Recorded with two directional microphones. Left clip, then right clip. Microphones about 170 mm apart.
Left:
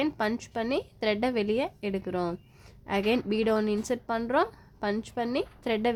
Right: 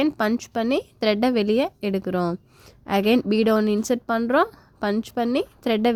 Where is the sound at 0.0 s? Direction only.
30° right (ahead or behind).